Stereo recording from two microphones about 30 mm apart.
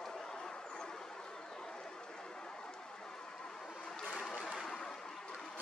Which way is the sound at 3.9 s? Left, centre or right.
Centre.